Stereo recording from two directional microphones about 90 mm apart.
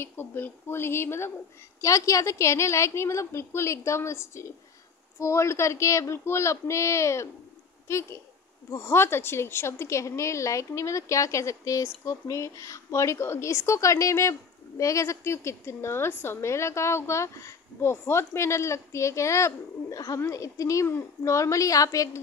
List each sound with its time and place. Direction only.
0.0 s a woman's voice: 25° left (ahead or behind)